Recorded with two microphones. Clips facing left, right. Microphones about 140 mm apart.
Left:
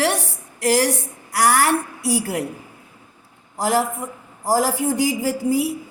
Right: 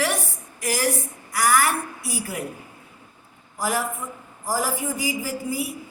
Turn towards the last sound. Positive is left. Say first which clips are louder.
# left 8 dB
turn(degrees=70)  # may be behind; listen again after turning